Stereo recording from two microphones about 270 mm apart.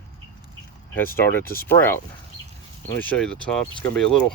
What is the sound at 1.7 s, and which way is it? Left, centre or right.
Speech, centre.